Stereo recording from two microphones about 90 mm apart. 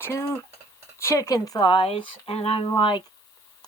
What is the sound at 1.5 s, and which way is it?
Speech, 60° left (ahead or behind).